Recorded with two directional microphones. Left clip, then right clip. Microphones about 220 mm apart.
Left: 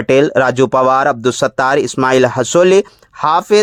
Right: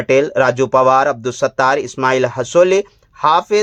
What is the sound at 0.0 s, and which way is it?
Speech, 40° left (ahead or behind).